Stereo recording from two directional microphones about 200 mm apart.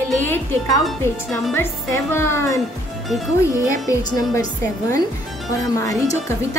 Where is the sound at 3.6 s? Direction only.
15° left (ahead or behind).